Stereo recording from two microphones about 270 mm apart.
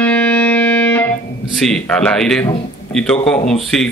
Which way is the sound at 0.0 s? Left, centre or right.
Centre.